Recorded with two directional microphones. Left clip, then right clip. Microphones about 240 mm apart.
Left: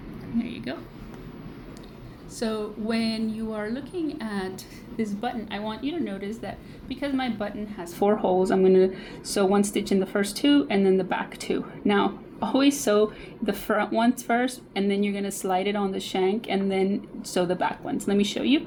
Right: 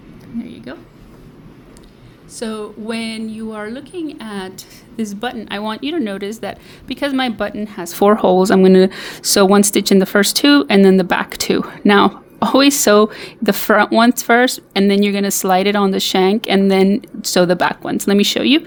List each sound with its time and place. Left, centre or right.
0.4 s a sound: right
2.4 s a woman's voice: right
5.2 s a woman's voice: right